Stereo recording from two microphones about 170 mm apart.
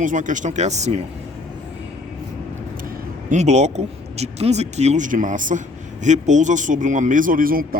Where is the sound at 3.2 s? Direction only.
45° right (ahead or behind).